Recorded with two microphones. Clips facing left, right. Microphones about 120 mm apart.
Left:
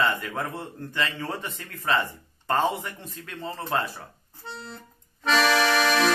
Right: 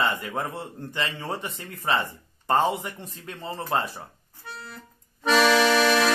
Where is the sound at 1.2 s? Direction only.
20° right (ahead or behind).